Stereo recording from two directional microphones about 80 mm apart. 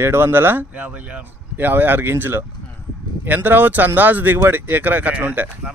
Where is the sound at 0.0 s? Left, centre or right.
Right.